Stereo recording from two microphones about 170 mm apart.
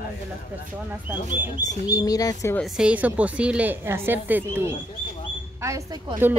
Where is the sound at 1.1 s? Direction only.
15° right (ahead or behind).